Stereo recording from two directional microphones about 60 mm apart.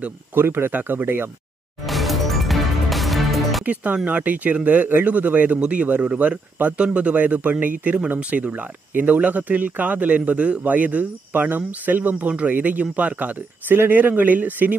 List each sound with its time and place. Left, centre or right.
0.3 s speech: right
1.9 s music: centre
3.6 s speech: right